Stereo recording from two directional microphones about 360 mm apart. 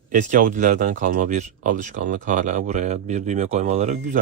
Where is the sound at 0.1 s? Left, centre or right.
Right.